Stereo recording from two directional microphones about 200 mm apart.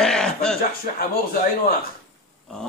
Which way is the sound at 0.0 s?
5° left (ahead or behind).